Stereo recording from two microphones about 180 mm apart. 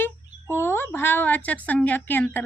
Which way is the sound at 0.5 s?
10° left (ahead or behind).